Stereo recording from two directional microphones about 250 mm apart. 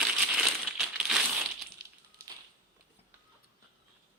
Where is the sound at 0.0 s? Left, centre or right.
Centre.